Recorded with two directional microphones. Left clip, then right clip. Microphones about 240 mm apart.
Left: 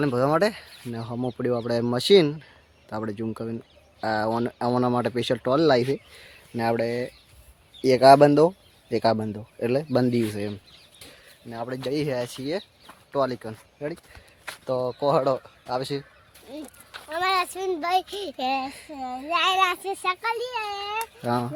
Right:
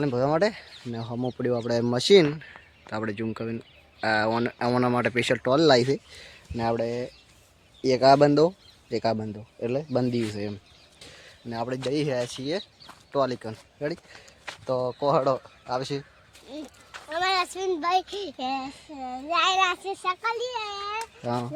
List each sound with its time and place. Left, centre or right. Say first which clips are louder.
0.0 s speech: left 2 dB; centre
5.4 s speech: even; centre
6.6 s speech: left 2 dB; centre
11.9 s speech: left 1 dB; centre
13.8 s speech: right 2 dB; right
14.4 s speech: left 1 dB; centre
21.2 s a child's voice: left 5 dB; centre